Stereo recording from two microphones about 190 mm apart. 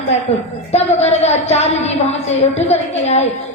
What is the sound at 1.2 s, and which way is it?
A woman's voice, 35° left (ahead or behind).